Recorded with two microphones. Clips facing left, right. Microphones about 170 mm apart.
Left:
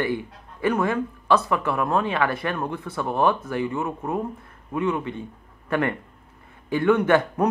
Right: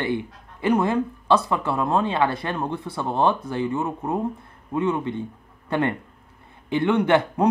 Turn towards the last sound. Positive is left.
turn(degrees=-25)  # may be behind; listen again after turning